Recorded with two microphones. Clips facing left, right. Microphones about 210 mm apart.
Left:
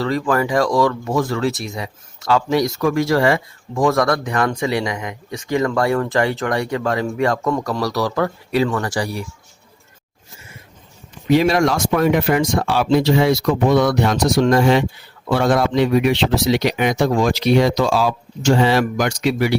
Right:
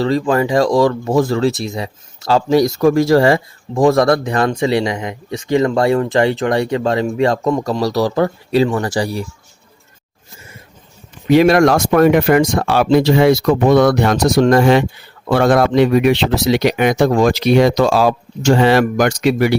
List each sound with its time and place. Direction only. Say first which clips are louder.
0.0 s speech: right 4 dB; 25° right (ahead or behind)
11.3 s speech: right 5 dB; 60° right (ahead or behind)